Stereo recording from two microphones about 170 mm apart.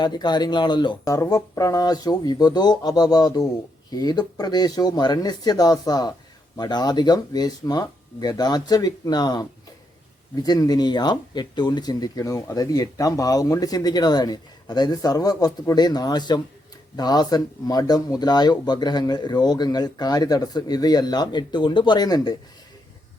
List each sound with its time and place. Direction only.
0.0 s speech: 25° left (ahead or behind)